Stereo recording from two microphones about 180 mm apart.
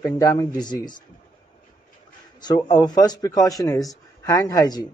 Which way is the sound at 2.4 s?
25° left (ahead or behind).